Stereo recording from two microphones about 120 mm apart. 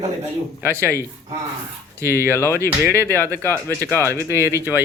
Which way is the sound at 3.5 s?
25° right (ahead or behind).